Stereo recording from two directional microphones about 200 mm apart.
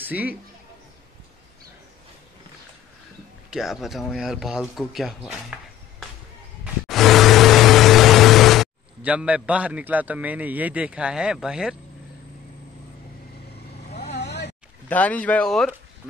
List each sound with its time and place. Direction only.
0.0 s a man's voice: 10° right (ahead or behind)
3.4 s speech: centre (ahead or behind)
6.6 s vehicle: centre (ahead or behind)
13.8 s vehicle: 55° left (ahead or behind)
14.9 s speech: 5° left (ahead or behind)